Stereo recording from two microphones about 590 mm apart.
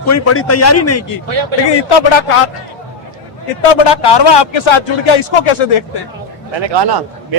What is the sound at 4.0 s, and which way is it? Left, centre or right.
Speech, left.